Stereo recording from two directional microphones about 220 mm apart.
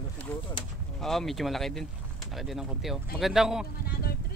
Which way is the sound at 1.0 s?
Centre (ahead or behind).